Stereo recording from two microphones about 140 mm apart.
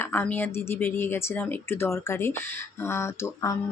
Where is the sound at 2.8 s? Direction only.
20° left (ahead or behind).